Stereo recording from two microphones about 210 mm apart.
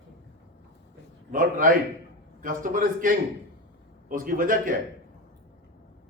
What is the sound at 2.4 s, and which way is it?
A man's voice, 40° right (ahead or behind).